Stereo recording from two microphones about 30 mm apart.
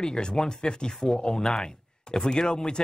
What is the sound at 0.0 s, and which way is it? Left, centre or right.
Speech, left.